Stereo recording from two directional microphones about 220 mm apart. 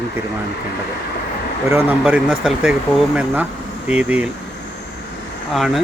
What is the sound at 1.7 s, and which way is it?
Speech, 5° right (ahead or behind).